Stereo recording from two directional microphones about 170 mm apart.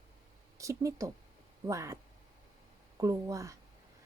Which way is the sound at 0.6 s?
20° right (ahead or behind).